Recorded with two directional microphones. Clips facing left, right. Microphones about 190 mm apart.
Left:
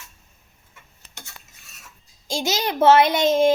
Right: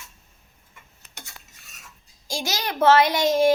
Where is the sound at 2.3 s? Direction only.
20° left (ahead or behind).